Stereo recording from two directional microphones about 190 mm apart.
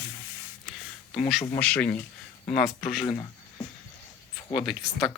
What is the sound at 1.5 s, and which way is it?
Speech, 5° left (ahead or behind).